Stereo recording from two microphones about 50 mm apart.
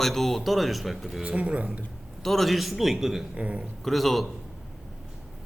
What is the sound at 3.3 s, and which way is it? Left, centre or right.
Speech, right.